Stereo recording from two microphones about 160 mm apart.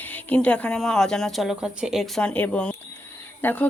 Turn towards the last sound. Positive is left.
turn(degrees=10)  # may be behind; listen again after turning